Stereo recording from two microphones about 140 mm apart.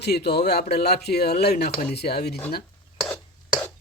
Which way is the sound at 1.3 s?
90° left.